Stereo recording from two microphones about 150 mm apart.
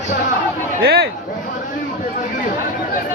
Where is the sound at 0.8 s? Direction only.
90° right.